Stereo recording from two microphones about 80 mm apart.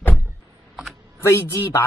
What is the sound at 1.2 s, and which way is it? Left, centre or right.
Speech, left.